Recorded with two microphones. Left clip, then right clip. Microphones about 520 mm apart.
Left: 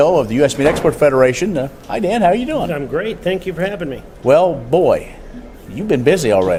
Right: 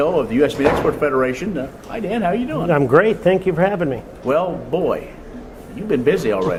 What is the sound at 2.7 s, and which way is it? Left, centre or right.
Speech, right.